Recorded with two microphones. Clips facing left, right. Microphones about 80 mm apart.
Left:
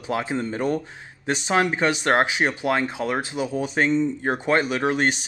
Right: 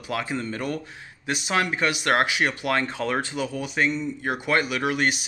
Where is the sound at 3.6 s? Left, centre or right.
Left.